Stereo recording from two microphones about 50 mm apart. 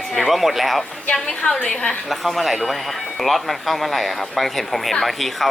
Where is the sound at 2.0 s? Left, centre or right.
Centre.